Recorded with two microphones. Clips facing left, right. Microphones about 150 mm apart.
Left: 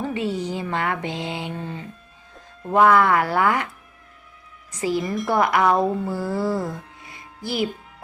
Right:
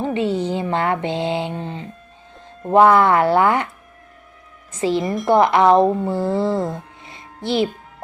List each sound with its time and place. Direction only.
0.0 s speech: 25° right (ahead or behind)
4.7 s speech: 25° right (ahead or behind)